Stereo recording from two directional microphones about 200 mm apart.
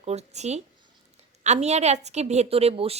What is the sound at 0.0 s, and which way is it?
A woman's voice, 35° right (ahead or behind).